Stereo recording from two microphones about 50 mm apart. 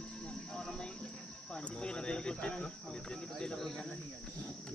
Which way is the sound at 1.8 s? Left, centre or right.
Centre.